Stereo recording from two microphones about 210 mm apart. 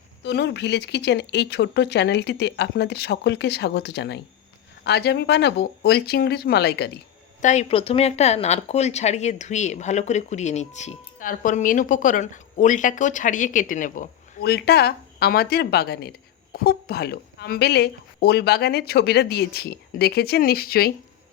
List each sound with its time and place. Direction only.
0.2 s speech: 55° left (ahead or behind)
7.4 s speech: 35° left (ahead or behind)